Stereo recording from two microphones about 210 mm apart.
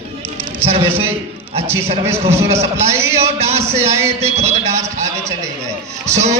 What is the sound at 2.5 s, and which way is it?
A man's voice, 30° right (ahead or behind).